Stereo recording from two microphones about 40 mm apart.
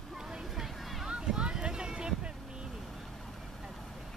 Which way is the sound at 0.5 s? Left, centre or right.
Centre.